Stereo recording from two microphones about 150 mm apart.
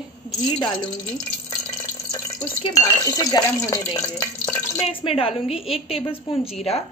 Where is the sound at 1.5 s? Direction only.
20° left (ahead or behind).